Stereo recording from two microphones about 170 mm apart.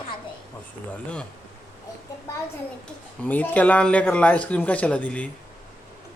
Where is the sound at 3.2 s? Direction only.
10° left (ahead or behind).